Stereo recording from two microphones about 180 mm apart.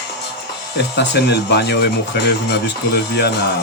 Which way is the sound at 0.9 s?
70° left (ahead or behind).